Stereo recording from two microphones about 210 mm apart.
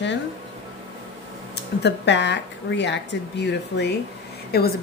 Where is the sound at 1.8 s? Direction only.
55° left (ahead or behind).